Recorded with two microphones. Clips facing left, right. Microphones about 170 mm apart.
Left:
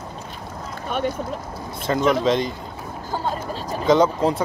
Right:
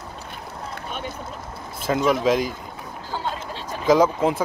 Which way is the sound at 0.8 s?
55° left (ahead or behind).